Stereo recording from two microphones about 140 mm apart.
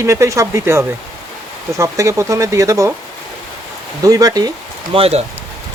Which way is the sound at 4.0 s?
25° right (ahead or behind).